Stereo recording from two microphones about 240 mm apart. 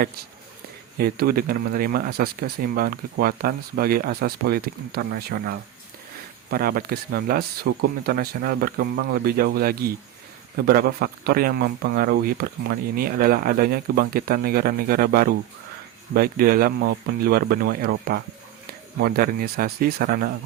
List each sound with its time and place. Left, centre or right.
0.9 s speech: right